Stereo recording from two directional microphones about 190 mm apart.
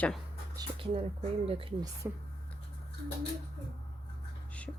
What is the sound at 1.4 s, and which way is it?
Speech, 30° right (ahead or behind).